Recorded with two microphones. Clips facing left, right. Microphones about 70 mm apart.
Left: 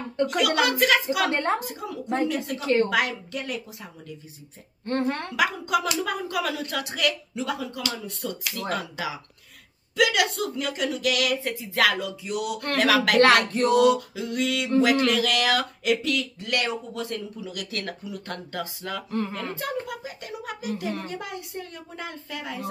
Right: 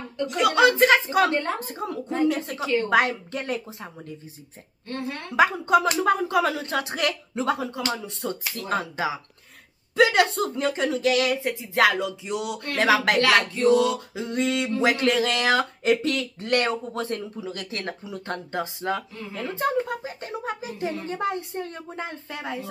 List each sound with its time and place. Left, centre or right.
0.4 s speech: right
2.6 s a woman's voice: left
2.9 s speech: right
4.8 s a woman's voice: left
5.3 s speech: right
19.1 s speech: left
19.5 s music: right
21.1 s speech: right